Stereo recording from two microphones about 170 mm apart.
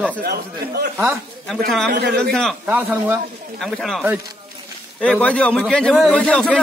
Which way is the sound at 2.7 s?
10° right (ahead or behind).